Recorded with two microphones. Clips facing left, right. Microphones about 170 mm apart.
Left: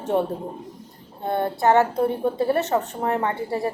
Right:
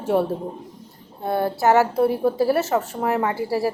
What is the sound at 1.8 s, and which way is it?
Speech, 5° right (ahead or behind).